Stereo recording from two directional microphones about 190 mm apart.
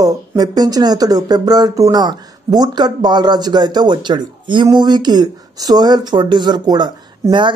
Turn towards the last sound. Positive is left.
turn(degrees=-25)  # may be behind; listen again after turning